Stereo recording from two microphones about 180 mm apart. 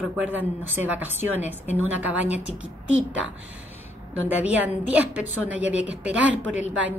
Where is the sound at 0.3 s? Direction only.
10° right (ahead or behind).